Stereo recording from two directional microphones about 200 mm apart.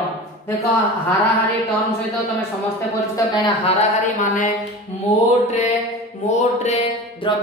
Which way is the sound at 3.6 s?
35° left (ahead or behind).